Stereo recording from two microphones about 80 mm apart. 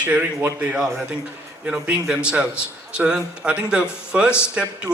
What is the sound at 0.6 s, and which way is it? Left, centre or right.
Speech, centre.